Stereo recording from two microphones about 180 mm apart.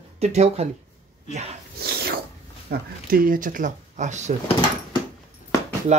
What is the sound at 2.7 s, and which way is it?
Speech, 50° right (ahead or behind).